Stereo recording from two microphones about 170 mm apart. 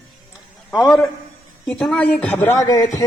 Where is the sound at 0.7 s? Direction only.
Centre (ahead or behind).